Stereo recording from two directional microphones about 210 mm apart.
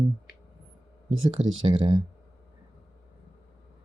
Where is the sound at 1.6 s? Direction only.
25° right (ahead or behind).